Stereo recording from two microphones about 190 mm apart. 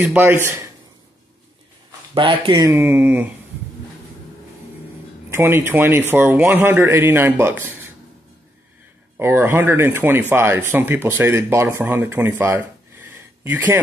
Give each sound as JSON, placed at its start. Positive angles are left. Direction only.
{"t": 0.0, "sound": "a man's voice", "side_deg": -10}
{"t": 2.1, "sound": "speech", "side_deg": -25}
{"t": 2.7, "sound": "a man's voice", "side_deg": -10}
{"t": 5.3, "sound": "a man's voice", "side_deg": -10}
{"t": 9.1, "sound": "a man's voice", "side_deg": -10}